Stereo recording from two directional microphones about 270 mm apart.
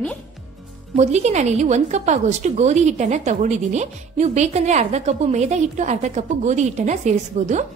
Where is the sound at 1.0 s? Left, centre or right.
Right.